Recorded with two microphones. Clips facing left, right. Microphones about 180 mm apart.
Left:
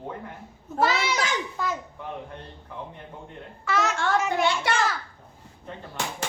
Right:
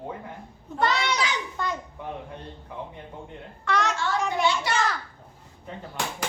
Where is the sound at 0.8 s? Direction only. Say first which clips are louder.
Left 1 dB; 5° left (ahead or behind).